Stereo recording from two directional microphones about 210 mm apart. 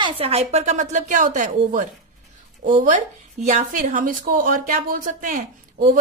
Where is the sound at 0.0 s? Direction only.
30° right (ahead or behind).